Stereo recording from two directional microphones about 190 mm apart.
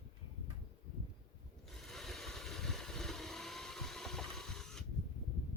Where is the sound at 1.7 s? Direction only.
Centre (ahead or behind).